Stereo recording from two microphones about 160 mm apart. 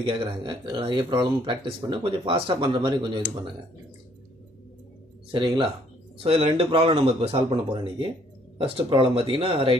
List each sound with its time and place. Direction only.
0.0 s speech: 30° right (ahead or behind)
5.3 s speech: 30° right (ahead or behind)